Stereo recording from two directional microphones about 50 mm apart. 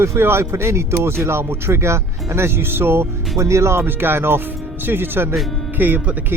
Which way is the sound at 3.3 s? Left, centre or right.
Right.